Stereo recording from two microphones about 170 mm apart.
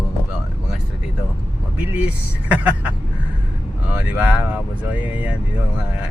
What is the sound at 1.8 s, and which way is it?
Speech, 10° right (ahead or behind).